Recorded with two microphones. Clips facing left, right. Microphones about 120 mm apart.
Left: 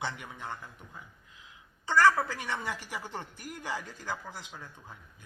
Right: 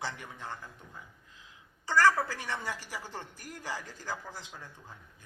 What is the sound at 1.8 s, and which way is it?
A woman's voice, 20° left (ahead or behind).